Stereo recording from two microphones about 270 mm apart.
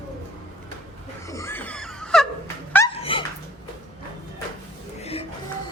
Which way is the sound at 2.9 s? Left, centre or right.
Centre.